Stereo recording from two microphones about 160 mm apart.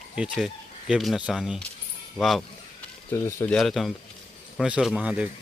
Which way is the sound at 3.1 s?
20° left (ahead or behind).